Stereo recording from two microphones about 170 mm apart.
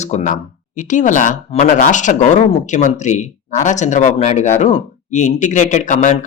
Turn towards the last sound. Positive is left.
turn(degrees=45)  # may be behind; listen again after turning